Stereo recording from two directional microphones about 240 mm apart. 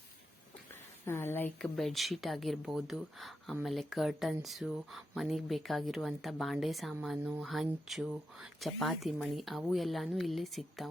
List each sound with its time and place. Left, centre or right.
1.0 s speech: centre